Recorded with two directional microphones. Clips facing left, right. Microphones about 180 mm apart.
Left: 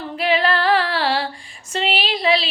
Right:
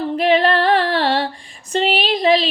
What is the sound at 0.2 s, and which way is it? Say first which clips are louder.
Female singing: right 3 dB; 40° right (ahead or behind).